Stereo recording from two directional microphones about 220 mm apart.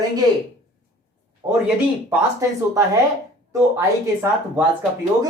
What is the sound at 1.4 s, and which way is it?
Speech, 10° right (ahead or behind).